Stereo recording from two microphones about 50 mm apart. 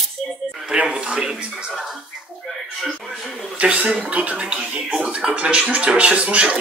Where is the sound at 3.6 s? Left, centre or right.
Right.